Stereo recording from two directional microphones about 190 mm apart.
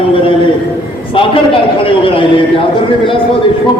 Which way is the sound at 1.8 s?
30° left (ahead or behind).